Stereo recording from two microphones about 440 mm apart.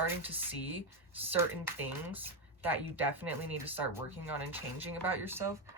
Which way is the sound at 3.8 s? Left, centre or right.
Centre.